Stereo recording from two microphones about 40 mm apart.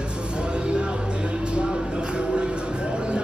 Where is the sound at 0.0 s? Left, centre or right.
Right.